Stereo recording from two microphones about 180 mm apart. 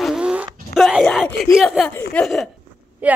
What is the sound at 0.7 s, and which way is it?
Speech, centre (ahead or behind).